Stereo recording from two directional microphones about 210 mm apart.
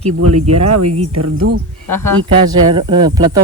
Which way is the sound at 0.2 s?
90° right.